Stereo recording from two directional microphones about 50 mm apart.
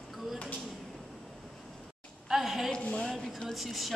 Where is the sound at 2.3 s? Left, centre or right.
Centre.